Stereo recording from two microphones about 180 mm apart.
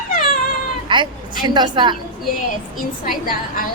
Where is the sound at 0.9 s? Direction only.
25° right (ahead or behind).